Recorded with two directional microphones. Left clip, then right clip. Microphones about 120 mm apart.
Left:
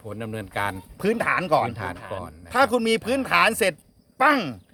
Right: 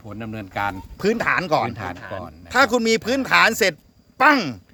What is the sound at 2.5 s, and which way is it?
Speech, 25° right (ahead or behind).